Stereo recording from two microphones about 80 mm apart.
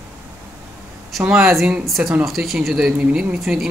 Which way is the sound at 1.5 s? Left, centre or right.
Centre.